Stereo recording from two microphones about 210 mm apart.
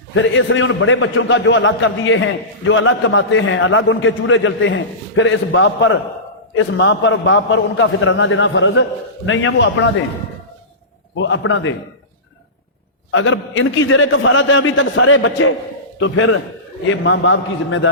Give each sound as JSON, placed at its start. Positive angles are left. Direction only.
{"t": 0.1, "sound": "a man's voice", "side_deg": 65}
{"t": 11.2, "sound": "a man's voice", "side_deg": 65}
{"t": 13.1, "sound": "a man's voice", "side_deg": 70}